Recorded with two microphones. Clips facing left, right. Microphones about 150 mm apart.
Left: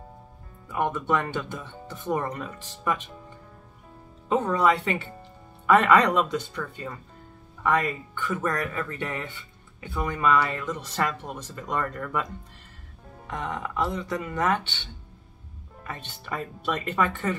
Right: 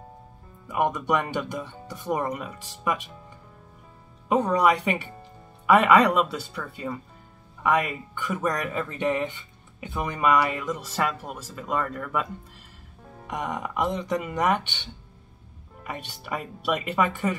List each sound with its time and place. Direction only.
0.7 s speech: 15° right (ahead or behind)
4.3 s speech: 15° right (ahead or behind)
13.3 s speech: 15° right (ahead or behind)